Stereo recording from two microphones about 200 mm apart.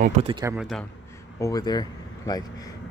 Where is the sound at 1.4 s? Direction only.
20° left (ahead or behind).